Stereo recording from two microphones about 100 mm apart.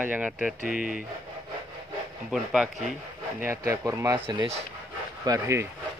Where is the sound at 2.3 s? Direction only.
5° right (ahead or behind).